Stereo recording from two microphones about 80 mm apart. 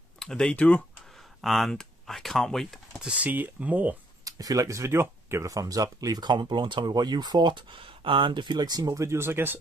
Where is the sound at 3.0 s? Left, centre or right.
Centre.